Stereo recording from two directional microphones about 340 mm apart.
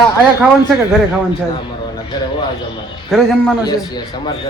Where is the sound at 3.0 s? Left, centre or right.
Centre.